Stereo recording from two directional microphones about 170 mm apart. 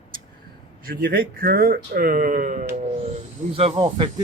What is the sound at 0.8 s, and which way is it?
Speech, 60° right (ahead or behind).